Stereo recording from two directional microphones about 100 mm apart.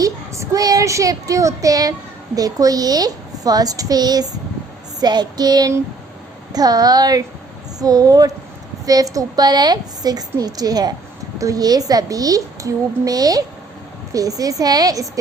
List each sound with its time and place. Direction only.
0.0 s a child's voice: 35° right (ahead or behind)